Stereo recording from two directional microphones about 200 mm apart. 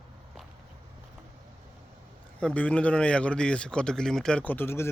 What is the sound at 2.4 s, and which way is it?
A man's voice, 5° left (ahead or behind).